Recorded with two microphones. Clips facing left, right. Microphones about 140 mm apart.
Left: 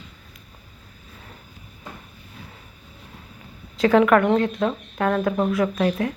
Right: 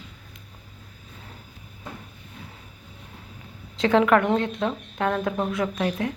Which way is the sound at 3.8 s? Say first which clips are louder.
Left 3 dB; 25° right (ahead or behind).